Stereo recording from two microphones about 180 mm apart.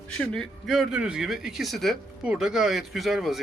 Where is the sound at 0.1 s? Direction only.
5° left (ahead or behind).